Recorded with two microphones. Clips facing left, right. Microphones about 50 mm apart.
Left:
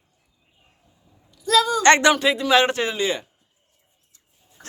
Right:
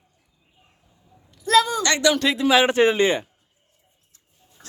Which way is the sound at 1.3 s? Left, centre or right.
Right.